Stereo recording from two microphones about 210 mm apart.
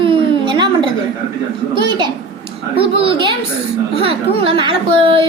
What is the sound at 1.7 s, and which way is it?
Speech, 20° right (ahead or behind).